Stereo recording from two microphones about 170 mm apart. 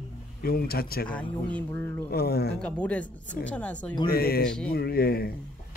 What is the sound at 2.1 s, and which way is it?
Speech, 70° left (ahead or behind).